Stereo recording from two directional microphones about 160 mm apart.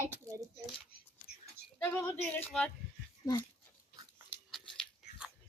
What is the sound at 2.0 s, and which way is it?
Speech, 10° left (ahead or behind).